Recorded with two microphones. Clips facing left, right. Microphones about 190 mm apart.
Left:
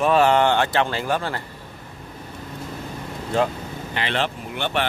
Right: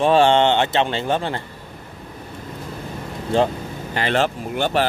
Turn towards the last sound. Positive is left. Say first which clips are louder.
# right 5 dB
turn(degrees=-40)  # may be behind; listen again after turning